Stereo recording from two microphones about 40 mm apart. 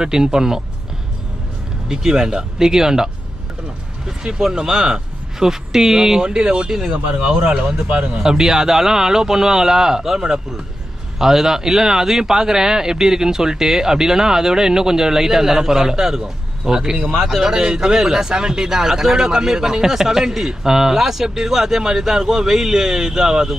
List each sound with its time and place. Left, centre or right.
0.0 s speech: centre
1.9 s speech: centre
4.2 s speech: centre
7.9 s speech: right
8.2 s speech: centre
17.1 s speech: centre
17.4 s speech: centre